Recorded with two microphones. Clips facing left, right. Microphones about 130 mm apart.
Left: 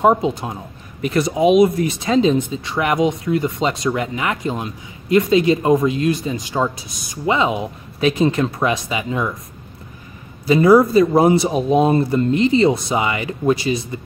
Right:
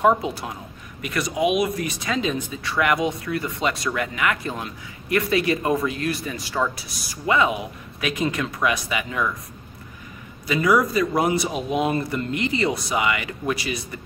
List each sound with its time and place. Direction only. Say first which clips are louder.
0.0 s speech: left 4 dB; 25° left (ahead or behind)
10.4 s speech: left 8 dB; 30° left (ahead or behind)